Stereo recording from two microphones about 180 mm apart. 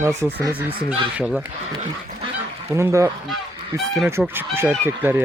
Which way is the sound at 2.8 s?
15° right (ahead or behind).